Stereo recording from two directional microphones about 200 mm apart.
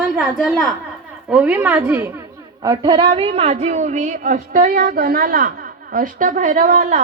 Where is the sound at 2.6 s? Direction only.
20° right (ahead or behind).